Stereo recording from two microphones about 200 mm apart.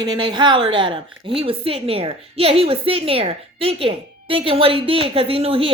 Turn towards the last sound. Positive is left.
turn(degrees=-30)  # may be behind; listen again after turning